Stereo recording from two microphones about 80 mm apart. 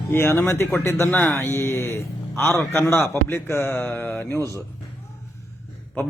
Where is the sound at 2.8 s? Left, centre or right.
Left.